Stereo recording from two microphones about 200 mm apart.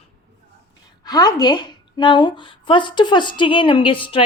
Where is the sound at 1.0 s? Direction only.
20° left (ahead or behind).